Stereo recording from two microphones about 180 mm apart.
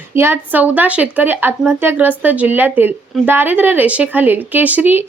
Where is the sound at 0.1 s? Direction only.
15° right (ahead or behind).